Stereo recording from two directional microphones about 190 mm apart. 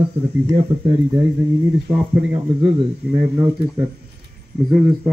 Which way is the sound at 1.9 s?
5° right (ahead or behind).